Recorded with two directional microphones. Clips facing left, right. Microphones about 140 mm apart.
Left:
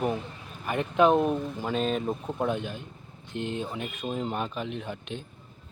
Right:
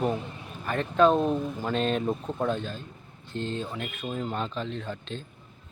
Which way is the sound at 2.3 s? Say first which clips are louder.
Even; 15° left (ahead or behind).